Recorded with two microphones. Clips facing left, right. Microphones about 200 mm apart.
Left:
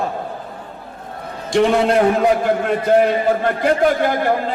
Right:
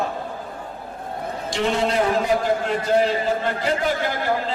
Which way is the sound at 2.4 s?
55° left (ahead or behind).